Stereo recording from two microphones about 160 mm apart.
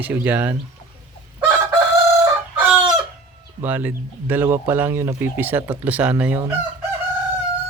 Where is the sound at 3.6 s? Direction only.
10° right (ahead or behind).